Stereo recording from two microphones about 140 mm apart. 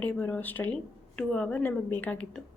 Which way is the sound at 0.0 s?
10° left (ahead or behind).